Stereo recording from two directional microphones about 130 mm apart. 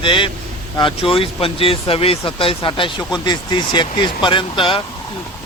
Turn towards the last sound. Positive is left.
turn(degrees=40)  # may be behind; listen again after turning